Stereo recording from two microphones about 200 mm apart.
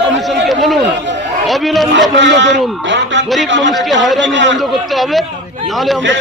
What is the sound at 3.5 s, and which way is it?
A man's voice, 65° right (ahead or behind).